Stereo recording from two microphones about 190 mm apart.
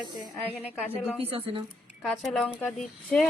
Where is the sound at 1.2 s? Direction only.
30° right (ahead or behind).